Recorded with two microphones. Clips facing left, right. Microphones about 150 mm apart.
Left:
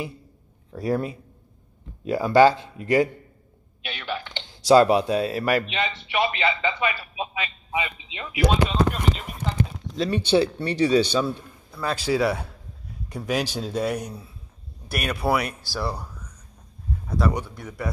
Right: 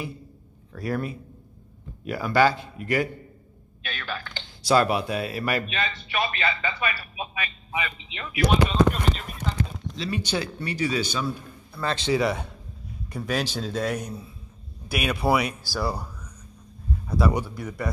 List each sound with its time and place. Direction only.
0.7 s a man's voice: 20° left (ahead or behind)
3.8 s a sound: 20° left (ahead or behind)
4.6 s a man's voice: 25° left (ahead or behind)
9.9 s speech: 40° left (ahead or behind)
11.8 s a man's voice: 10° left (ahead or behind)
14.9 s speech: centre (ahead or behind)
17.2 s speech: 10° right (ahead or behind)